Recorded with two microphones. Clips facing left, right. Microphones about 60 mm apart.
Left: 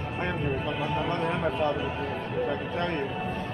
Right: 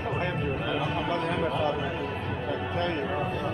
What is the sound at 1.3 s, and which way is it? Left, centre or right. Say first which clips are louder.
Speech: even; left.